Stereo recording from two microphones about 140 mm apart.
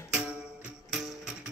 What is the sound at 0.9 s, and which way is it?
Music, centre (ahead or behind).